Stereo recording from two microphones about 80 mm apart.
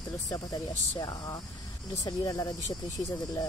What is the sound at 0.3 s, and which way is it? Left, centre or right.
Speech, left.